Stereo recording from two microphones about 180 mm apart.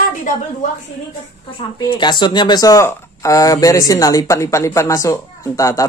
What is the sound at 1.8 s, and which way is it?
Speech, 25° left (ahead or behind).